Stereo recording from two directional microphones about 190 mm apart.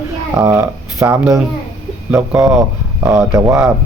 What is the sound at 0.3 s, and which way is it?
Speech, 15° right (ahead or behind).